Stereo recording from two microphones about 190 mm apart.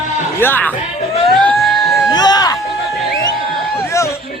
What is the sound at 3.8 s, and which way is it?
Speech, 15° left (ahead or behind).